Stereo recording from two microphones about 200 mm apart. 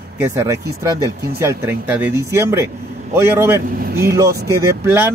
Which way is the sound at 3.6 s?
50° right (ahead or behind).